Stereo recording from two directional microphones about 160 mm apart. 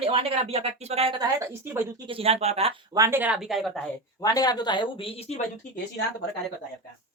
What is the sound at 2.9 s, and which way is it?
Speech, 20° right (ahead or behind).